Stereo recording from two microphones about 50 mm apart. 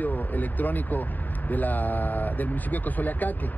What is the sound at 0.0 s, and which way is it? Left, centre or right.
Speech, left.